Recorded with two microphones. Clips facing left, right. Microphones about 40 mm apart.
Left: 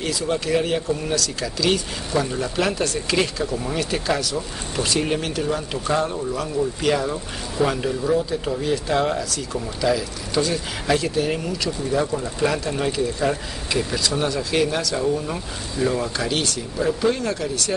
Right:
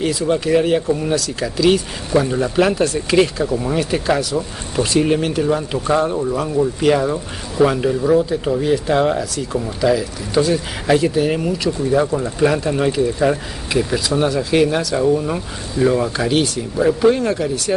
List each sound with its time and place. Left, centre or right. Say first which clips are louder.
0.0 s speech: right 6 dB; centre